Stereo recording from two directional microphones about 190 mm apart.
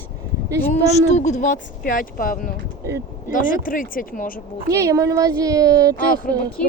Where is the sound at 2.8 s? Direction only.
15° right (ahead or behind).